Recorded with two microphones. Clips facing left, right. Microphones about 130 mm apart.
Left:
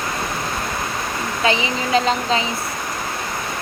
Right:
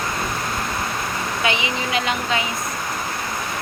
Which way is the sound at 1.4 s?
30° left (ahead or behind).